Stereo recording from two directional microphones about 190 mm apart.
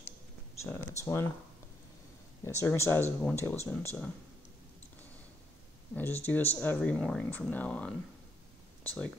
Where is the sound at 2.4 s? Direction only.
15° left (ahead or behind).